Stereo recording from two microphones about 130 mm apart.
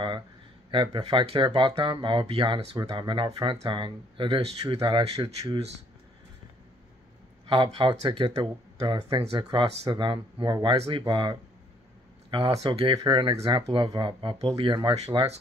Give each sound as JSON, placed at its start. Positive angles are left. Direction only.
{"t": 0.9, "sound": "speech", "side_deg": -40}
{"t": 7.4, "sound": "speech", "side_deg": -40}
{"t": 12.9, "sound": "speech", "side_deg": -35}
{"t": 15.0, "sound": "speech", "side_deg": -50}